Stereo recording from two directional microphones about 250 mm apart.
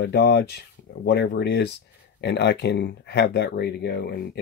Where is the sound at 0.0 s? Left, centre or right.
Left.